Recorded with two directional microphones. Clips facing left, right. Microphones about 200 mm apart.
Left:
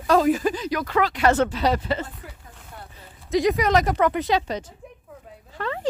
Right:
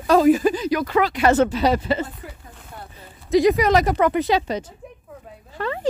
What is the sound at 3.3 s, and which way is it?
Speech, 5° right (ahead or behind).